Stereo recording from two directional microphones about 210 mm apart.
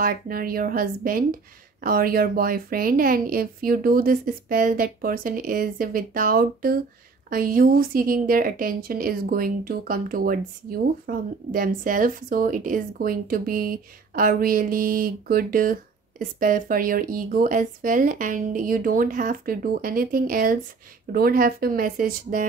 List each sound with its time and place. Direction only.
0.0 s a woman's voice: 40° right (ahead or behind)